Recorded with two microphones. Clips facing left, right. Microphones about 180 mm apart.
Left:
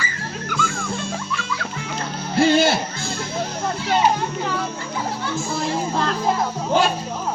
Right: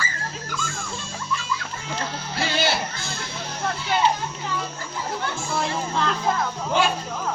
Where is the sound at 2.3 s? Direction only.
50° left (ahead or behind).